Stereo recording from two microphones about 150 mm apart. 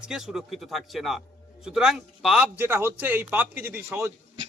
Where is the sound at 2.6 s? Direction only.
15° right (ahead or behind).